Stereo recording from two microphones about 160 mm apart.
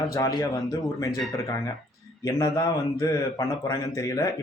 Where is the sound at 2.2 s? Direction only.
20° left (ahead or behind).